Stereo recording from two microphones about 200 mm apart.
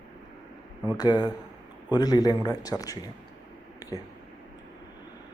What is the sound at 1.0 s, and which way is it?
A man's voice, 20° left (ahead or behind).